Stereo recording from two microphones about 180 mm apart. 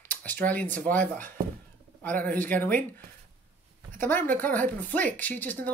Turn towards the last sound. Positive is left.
turn(degrees=10)  # may be behind; listen again after turning